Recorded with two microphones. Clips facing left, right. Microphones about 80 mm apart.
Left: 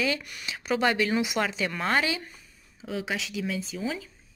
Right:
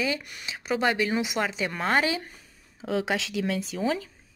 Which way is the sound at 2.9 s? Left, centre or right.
Right.